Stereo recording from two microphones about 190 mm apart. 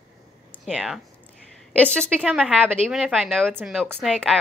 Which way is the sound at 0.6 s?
5° right (ahead or behind).